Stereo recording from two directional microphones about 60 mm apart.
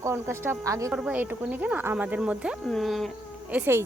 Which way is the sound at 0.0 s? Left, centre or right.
Right.